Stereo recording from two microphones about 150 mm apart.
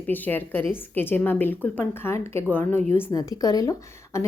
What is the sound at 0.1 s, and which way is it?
A woman's voice, 10° left (ahead or behind).